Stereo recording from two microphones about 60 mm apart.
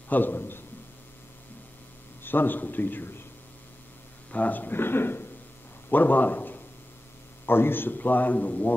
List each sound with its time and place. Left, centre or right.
0.1 s a man's voice: left
2.2 s a man's voice: left
4.3 s a man's voice: left